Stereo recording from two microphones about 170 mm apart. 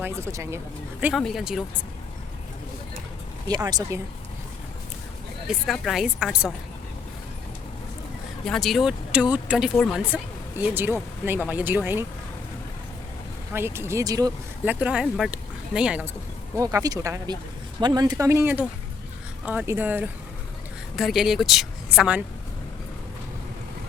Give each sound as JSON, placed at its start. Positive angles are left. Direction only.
{"t": 0.0, "sound": "speech", "side_deg": -15}
{"t": 1.0, "sound": "speech", "side_deg": 0}
{"t": 3.5, "sound": "speech", "side_deg": -25}
{"t": 5.5, "sound": "speech", "side_deg": 0}
{"t": 8.4, "sound": "speech", "side_deg": 0}
{"t": 13.5, "sound": "speech", "side_deg": -15}
{"t": 14.6, "sound": "speech", "side_deg": -10}
{"t": 16.6, "sound": "speech", "side_deg": -20}